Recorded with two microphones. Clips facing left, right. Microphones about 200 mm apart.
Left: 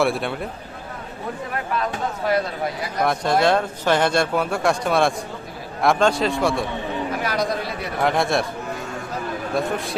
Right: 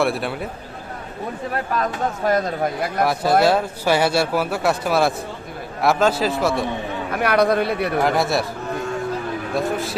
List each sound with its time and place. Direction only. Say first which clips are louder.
0.0 s speech: even; centre (ahead or behind)
1.8 s speech: right 3 dB; 45° right (ahead or behind)
3.0 s speech: right 2 dB; 5° right (ahead or behind)
7.1 s a man's voice: right 9 dB; 60° right (ahead or behind)
8.0 s speech: left 3 dB; centre (ahead or behind)
9.6 s speech: right 1 dB; centre (ahead or behind)